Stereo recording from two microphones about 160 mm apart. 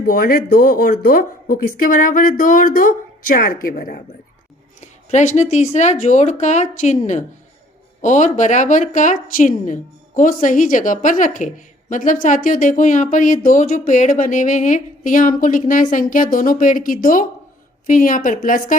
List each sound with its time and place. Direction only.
0.0 s speech: 65° left (ahead or behind)
4.8 s a woman's voice: 50° left (ahead or behind)